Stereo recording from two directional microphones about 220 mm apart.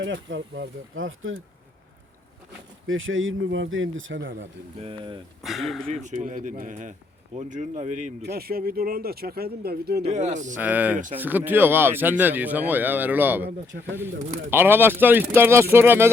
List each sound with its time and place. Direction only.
0.0 s speech: 55° right (ahead or behind)
2.8 s speech: 65° right (ahead or behind)
4.8 s speech: 25° right (ahead or behind)
5.4 s speech: centre (ahead or behind)
5.9 s speech: 30° right (ahead or behind)
8.2 s speech: 45° right (ahead or behind)
10.0 s speech: 30° right (ahead or behind)
10.6 s speech: 5° right (ahead or behind)
13.7 s speech: 50° right (ahead or behind)
14.5 s speech: 10° right (ahead or behind)